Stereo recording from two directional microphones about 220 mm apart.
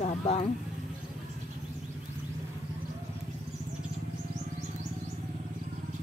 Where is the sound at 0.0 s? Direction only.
35° left (ahead or behind).